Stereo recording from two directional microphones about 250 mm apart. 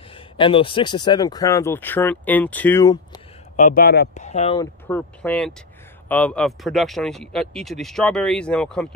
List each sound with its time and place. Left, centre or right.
0.1 s speech: left
3.5 s speech: left
4.6 s speech: centre